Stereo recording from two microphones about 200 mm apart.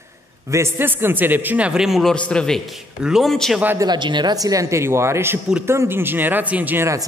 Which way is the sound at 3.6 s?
15° right (ahead or behind).